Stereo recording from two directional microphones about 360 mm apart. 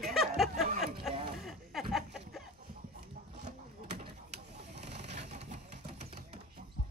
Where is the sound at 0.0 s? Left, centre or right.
Centre.